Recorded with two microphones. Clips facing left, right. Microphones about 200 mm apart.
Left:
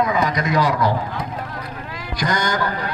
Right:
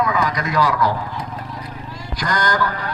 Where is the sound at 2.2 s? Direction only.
15° left (ahead or behind).